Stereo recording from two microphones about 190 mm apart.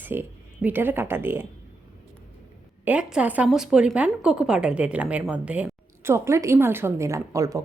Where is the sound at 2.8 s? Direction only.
5° right (ahead or behind).